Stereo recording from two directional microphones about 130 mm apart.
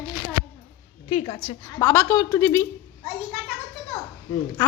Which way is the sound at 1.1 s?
50° left (ahead or behind).